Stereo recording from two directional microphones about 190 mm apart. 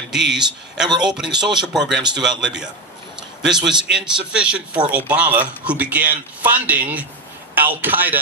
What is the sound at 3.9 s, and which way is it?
Speech, 5° right (ahead or behind).